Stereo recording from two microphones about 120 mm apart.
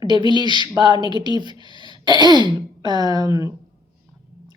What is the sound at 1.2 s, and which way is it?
Speech, 40° right (ahead or behind).